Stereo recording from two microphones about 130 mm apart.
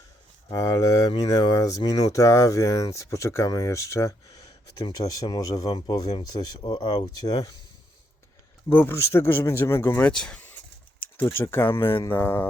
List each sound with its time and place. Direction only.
0.5 s speech: 30° left (ahead or behind)
8.7 s speech: 15° left (ahead or behind)
10.0 s speech: 5° left (ahead or behind)